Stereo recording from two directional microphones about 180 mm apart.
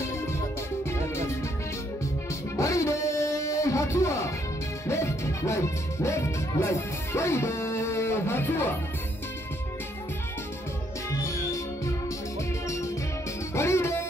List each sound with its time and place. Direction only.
0.8 s music: 15° left (ahead or behind)
2.5 s a sound: 15° left (ahead or behind)
4.8 s music: 15° left (ahead or behind)
11.1 s music: 15° left (ahead or behind)